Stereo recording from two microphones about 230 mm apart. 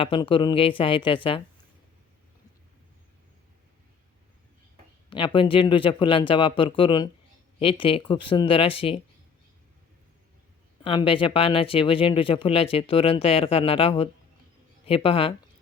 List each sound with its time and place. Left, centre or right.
0.0 s speech: left
5.0 s speech: left
10.8 s speech: left